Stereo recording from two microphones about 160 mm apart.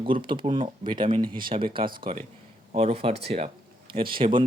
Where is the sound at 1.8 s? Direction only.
65° right (ahead or behind).